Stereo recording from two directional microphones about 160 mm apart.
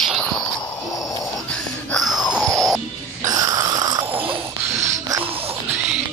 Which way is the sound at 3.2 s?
20° right (ahead or behind).